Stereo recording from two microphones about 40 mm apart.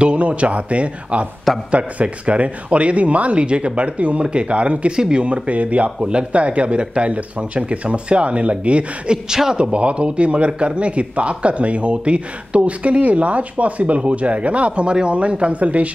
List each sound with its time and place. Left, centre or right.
0.0 s speech: right
4.9 s speech: centre
5.2 s speech: right
5.9 s speech: right
9.1 s speech: centre
9.7 s speech: right